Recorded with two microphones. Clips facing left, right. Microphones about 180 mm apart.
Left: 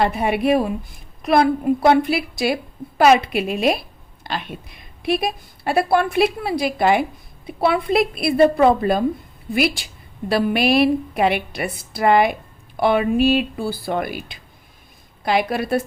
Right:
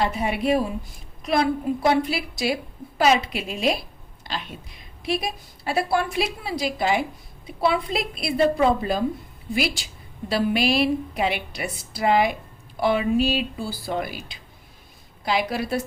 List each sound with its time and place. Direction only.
0.0 s a woman's voice: 60° left (ahead or behind)